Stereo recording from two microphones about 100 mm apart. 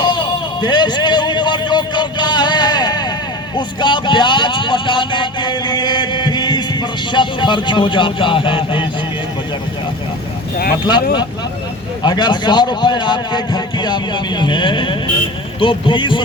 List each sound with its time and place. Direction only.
0.0 s a sound: 45° left (ahead or behind)
3.5 s speech: 50° left (ahead or behind)
10.8 s a man's voice: 45° left (ahead or behind)